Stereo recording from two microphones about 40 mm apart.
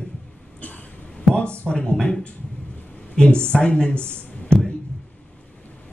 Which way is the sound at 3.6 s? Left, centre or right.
Left.